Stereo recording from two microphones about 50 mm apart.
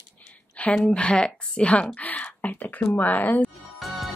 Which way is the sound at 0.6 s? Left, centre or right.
Left.